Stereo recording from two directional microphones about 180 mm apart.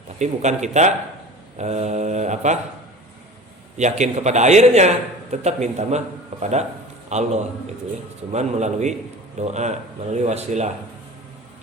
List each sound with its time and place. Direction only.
0.2 s a man's voice: 40° right (ahead or behind)
3.8 s a man's voice: 40° right (ahead or behind)
8.3 s a man's voice: 40° right (ahead or behind)